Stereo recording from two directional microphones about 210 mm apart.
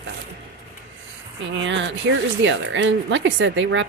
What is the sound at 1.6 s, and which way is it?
Speech, 60° right (ahead or behind).